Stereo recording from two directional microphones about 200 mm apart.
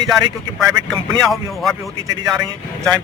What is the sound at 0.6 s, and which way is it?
A man's voice, centre (ahead or behind).